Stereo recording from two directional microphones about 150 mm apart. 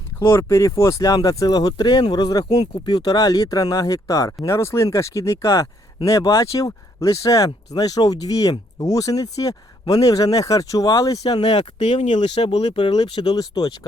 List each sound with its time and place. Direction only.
0.2 s speech: 15° left (ahead or behind)